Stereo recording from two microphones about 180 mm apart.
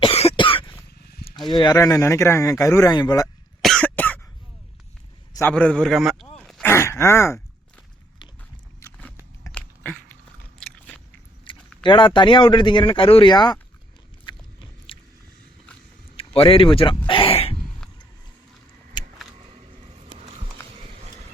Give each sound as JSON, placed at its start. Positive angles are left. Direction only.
{"t": 0.0, "sound": "cough", "side_deg": 35}
{"t": 1.5, "sound": "speech", "side_deg": 25}
{"t": 3.6, "sound": "cough", "side_deg": 5}
{"t": 5.3, "sound": "a man's voice", "side_deg": 10}
{"t": 6.5, "sound": "a sound", "side_deg": 10}
{"t": 8.8, "sound": "biting", "side_deg": 10}
{"t": 9.5, "sound": "a sound", "side_deg": 5}
{"t": 10.6, "sound": "biting", "side_deg": 5}
{"t": 11.5, "sound": "keys jangling", "side_deg": 30}
{"t": 11.8, "sound": "speech", "side_deg": 25}
{"t": 14.3, "sound": "biting", "side_deg": 30}
{"t": 16.1, "sound": "a sound", "side_deg": 30}
{"t": 19.0, "sound": "vehicle", "side_deg": 25}